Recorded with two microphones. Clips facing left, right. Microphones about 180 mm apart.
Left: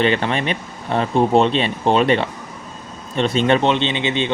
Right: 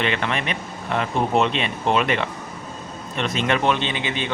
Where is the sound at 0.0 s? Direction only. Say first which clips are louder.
Left 5 dB; 35° left (ahead or behind).